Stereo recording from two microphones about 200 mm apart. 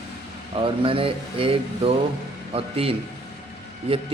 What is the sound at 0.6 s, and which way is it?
Speech, 25° right (ahead or behind).